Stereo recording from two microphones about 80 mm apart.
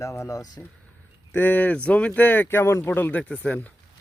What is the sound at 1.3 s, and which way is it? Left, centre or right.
Speech, left.